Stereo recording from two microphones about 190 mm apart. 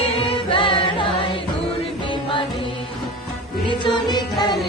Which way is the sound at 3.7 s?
25° left (ahead or behind).